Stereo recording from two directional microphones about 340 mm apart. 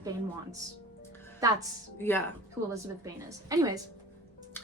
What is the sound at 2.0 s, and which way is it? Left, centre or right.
Speech, centre.